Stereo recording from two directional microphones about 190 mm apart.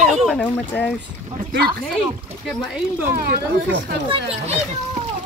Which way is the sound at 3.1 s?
50° right (ahead or behind).